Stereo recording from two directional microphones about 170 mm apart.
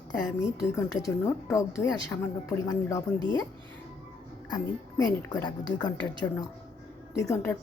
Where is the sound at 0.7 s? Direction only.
20° left (ahead or behind).